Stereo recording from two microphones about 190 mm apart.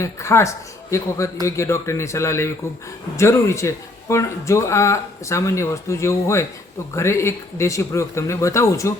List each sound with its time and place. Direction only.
0.0 s speech: 15° left (ahead or behind)